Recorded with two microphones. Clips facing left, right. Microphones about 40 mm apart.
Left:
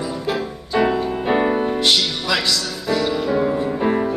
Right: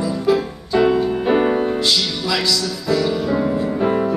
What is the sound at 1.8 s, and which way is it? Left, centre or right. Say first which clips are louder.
Music: left 1 dB; left.